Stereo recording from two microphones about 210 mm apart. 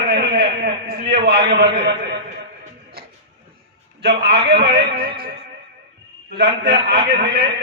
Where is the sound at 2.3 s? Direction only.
35° right (ahead or behind).